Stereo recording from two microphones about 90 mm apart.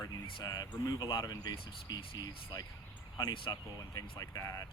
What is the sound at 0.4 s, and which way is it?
Speech, 45° left (ahead or behind).